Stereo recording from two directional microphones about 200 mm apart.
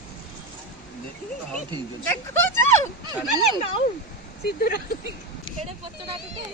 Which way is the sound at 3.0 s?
20° right (ahead or behind).